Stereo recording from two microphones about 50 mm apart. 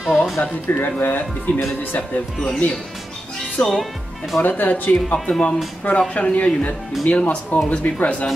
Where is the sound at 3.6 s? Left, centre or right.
Left.